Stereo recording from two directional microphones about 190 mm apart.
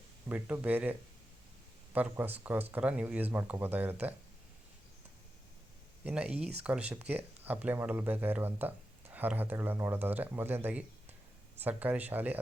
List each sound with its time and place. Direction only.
0.3 s speech: 10° right (ahead or behind)
6.2 s speech: 30° right (ahead or behind)
6.6 s speech: 5° right (ahead or behind)